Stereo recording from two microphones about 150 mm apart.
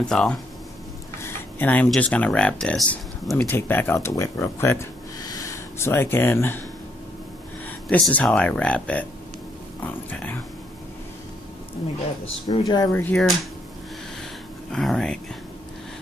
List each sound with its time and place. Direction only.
0.1 s speech: 5° left (ahead or behind)
1.2 s a sound: 10° left (ahead or behind)
1.9 s speech: 10° left (ahead or behind)
7.9 s speech: 10° left (ahead or behind)
12.6 s speech: 25° left (ahead or behind)
12.9 s speech: 10° left (ahead or behind)
14.7 s speech: 5° left (ahead or behind)